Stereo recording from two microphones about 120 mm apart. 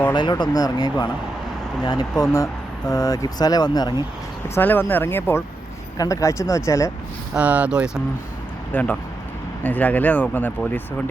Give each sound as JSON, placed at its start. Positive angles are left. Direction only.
{"t": 0.1, "sound": "speech", "side_deg": 40}
{"t": 4.4, "sound": "speech", "side_deg": 20}
{"t": 7.3, "sound": "speech", "side_deg": -10}
{"t": 8.7, "sound": "speech", "side_deg": 15}